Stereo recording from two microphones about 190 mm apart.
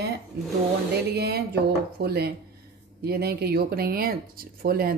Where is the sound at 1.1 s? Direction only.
55° right (ahead or behind).